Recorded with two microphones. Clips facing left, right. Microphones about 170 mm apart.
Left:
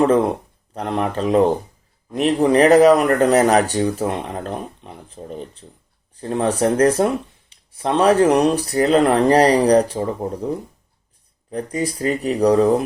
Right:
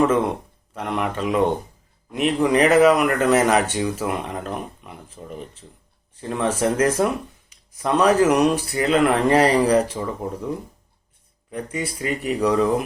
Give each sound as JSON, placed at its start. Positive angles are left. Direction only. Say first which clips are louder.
{"t": 0.7, "sound": "speech", "louder": "left 3 dB", "side_deg": 35}
{"t": 11.5, "sound": "speech", "louder": "left 5 dB", "side_deg": 35}